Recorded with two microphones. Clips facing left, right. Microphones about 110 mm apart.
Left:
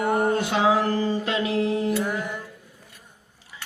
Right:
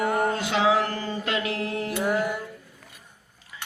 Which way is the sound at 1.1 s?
30° left (ahead or behind).